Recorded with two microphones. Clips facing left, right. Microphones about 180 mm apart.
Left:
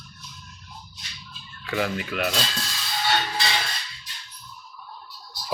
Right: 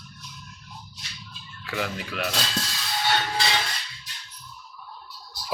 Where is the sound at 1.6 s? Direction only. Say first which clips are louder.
Left 4 dB; centre (ahead or behind).